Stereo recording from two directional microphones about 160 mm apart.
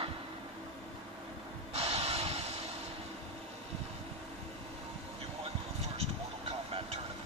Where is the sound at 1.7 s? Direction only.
40° right (ahead or behind).